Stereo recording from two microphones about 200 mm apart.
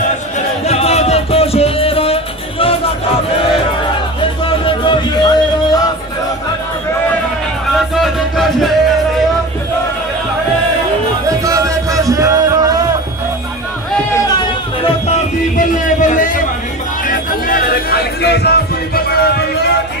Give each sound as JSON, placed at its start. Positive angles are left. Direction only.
{"t": 0.7, "sound": "music", "side_deg": 30}
{"t": 4.2, "sound": "music", "side_deg": 25}
{"t": 7.7, "sound": "music", "side_deg": 0}
{"t": 11.2, "sound": "music", "side_deg": -15}
{"t": 16.0, "sound": "a sound", "side_deg": 40}